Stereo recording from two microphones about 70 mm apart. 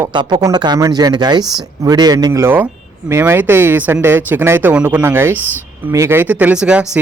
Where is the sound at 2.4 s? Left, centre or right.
Right.